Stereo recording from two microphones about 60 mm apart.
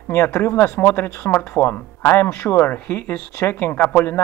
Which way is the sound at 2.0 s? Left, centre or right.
Left.